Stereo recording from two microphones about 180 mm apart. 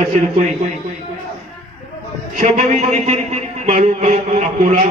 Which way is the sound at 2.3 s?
40° right (ahead or behind).